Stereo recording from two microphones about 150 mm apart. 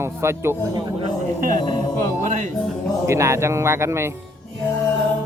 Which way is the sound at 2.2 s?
55° right (ahead or behind).